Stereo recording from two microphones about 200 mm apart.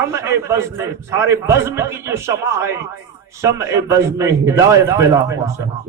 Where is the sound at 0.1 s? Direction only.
15° right (ahead or behind).